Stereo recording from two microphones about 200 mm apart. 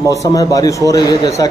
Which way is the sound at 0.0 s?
15° left (ahead or behind).